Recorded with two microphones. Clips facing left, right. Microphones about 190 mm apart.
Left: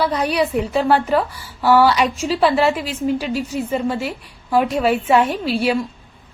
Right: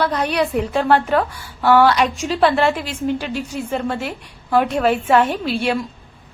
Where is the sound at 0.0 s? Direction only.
5° left (ahead or behind).